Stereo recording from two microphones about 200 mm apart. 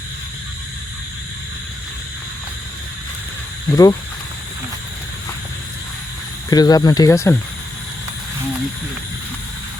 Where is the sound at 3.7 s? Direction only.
20° left (ahead or behind).